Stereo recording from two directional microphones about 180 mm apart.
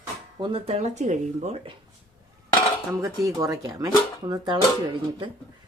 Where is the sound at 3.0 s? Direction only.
20° right (ahead or behind).